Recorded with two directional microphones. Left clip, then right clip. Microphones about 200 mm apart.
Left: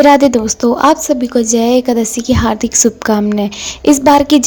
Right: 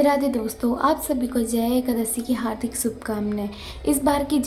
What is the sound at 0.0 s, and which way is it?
A woman's voice, 40° left (ahead or behind).